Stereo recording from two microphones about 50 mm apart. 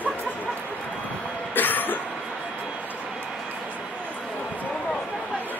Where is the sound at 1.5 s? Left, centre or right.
Left.